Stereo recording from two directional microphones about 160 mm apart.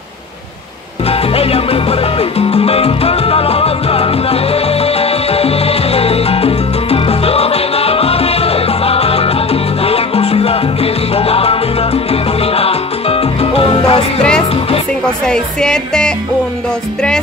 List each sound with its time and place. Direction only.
1.0 s music: 40° left (ahead or behind)
15.2 s music: 5° left (ahead or behind)